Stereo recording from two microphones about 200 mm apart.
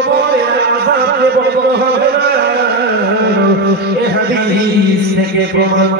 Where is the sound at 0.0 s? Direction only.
55° right (ahead or behind).